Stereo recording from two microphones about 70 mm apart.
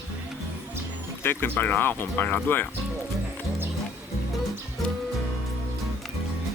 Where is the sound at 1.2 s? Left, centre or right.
Left.